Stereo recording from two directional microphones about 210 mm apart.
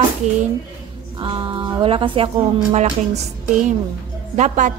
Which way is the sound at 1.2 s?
25° right (ahead or behind).